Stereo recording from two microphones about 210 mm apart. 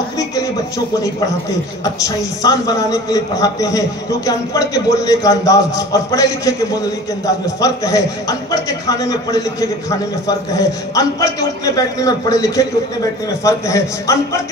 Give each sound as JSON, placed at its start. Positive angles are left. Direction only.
{"t": 2.0, "sound": "a man's voice", "side_deg": 15}